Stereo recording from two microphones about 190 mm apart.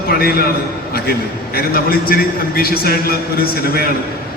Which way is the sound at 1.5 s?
50° left (ahead or behind).